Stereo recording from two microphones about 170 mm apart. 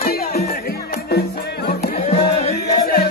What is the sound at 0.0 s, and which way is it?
Music, 65° left (ahead or behind).